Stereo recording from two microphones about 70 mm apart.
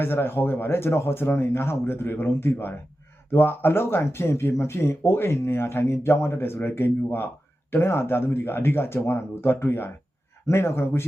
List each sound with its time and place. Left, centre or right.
0.0 s speech: left